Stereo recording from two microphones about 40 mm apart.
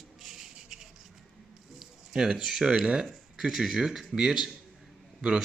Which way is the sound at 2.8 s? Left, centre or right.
Right.